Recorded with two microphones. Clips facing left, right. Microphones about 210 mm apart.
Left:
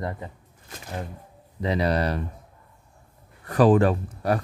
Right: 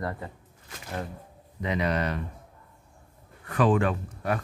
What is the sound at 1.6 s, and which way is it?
Speech, 35° left (ahead or behind).